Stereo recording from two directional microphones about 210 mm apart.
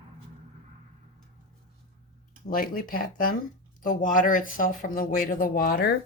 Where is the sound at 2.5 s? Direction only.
45° left (ahead or behind).